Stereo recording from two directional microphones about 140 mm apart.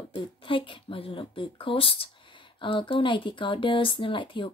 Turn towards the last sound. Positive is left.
turn(degrees=35)  # may be behind; listen again after turning